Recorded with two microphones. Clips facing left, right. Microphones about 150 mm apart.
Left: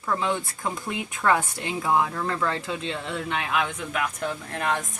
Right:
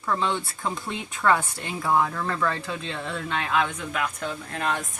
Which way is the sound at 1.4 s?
20° left (ahead or behind).